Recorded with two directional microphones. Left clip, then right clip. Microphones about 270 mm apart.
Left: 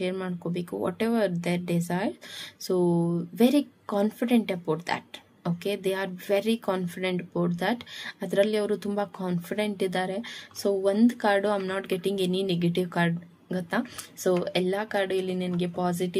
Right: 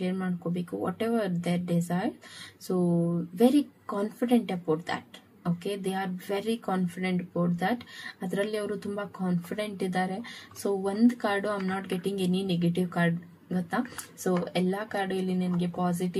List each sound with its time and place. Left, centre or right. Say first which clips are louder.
0.0 s speech: left 3 dB; left
3.3 s speech: even; left